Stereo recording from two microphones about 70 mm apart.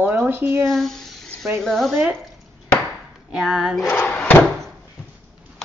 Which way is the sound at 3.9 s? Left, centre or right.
Centre.